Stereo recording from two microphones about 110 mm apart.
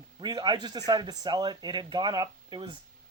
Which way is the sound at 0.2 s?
40° right (ahead or behind).